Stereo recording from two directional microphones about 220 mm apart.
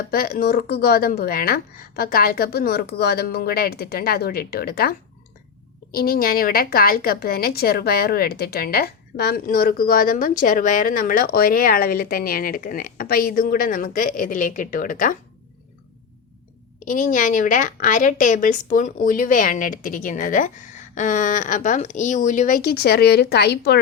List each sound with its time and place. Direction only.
0.1 s a woman's voice: 45° left (ahead or behind)
16.8 s a woman's voice: 35° left (ahead or behind)